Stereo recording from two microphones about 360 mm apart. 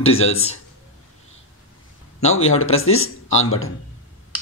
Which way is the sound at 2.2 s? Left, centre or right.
Left.